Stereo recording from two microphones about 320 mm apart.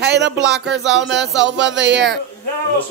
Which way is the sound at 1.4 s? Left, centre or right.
Right.